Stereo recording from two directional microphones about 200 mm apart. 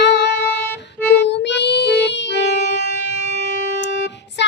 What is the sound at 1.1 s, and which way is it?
Music, 60° left (ahead or behind).